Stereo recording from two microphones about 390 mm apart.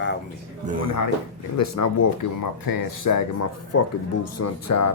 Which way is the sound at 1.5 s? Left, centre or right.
Left.